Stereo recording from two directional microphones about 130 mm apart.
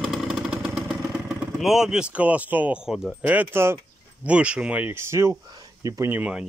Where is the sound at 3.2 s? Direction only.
15° right (ahead or behind).